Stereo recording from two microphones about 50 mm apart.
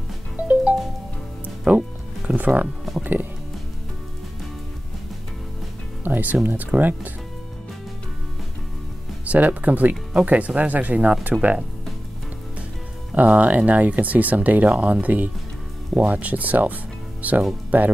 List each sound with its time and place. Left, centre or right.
0.4 s music: right
1.7 s speech: right
2.2 s music: right
3.0 s speech: right
6.0 s speech: right
9.2 s speech: right
13.1 s speech: right